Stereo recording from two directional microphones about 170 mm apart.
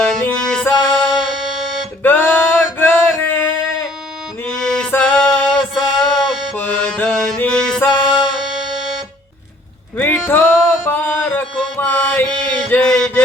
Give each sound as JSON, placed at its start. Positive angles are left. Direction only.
{"t": 0.0, "sound": "music", "side_deg": 5}
{"t": 2.0, "sound": "a sound", "side_deg": 10}
{"t": 4.4, "sound": "music", "side_deg": 5}
{"t": 10.2, "sound": "music", "side_deg": 15}
{"t": 12.7, "sound": "mantra", "side_deg": 5}